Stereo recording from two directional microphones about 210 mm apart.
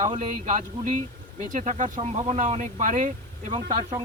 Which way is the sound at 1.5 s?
35° right (ahead or behind).